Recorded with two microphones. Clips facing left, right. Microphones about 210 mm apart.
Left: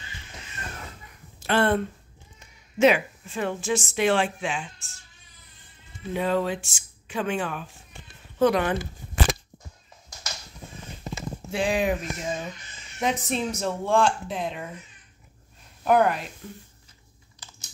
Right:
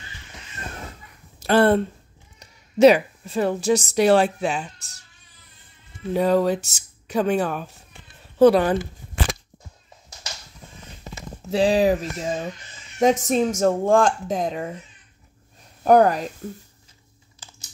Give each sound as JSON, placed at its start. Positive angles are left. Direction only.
{"t": 1.4, "sound": "a sound", "side_deg": -35}
{"t": 2.3, "sound": "a woman's voice", "side_deg": -35}
{"t": 6.1, "sound": "speech", "side_deg": -40}
{"t": 11.5, "sound": "speech", "side_deg": -35}
{"t": 13.0, "sound": "speech", "side_deg": -40}
{"t": 15.8, "sound": "speech", "side_deg": -40}